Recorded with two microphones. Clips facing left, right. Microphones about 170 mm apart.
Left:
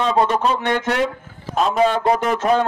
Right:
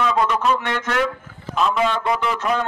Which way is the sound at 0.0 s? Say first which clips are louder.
Left 2 dB; 30° left (ahead or behind).